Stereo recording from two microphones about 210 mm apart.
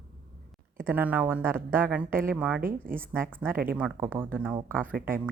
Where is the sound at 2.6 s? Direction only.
40° right (ahead or behind).